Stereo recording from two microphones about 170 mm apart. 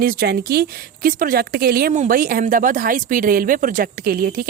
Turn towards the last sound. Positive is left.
turn(degrees=-60)  # may be behind; listen again after turning